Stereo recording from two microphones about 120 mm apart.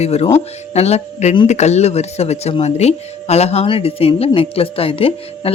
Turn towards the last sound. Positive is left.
turn(degrees=50)  # may be behind; listen again after turning